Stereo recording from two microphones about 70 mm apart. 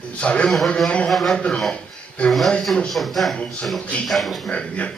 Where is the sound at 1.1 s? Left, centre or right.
Centre.